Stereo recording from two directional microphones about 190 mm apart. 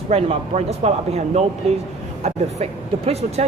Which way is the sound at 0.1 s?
30° right (ahead or behind).